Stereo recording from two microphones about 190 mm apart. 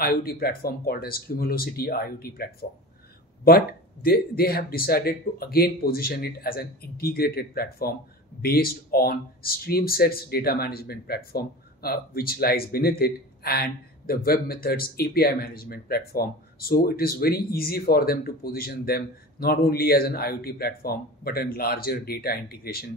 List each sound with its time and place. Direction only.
0.0 s speech: 50° left (ahead or behind)